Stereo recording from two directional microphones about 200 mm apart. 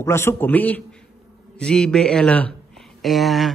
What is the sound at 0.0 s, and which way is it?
A man's voice, 15° left (ahead or behind).